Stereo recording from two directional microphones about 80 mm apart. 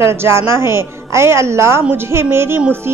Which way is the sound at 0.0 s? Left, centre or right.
Right.